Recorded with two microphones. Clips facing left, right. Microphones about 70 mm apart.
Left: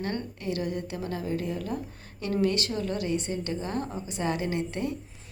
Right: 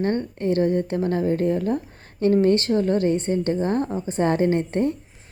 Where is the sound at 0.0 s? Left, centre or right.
Right.